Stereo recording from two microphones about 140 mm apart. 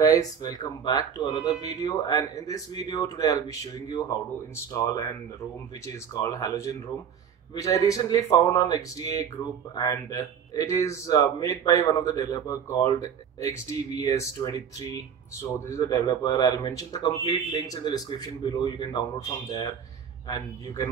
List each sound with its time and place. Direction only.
0.0 s a man's voice: 25° left (ahead or behind)
6.1 s a man's voice: 25° left (ahead or behind)